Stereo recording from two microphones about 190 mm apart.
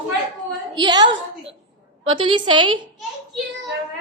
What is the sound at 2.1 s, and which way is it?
Speech, 25° right (ahead or behind).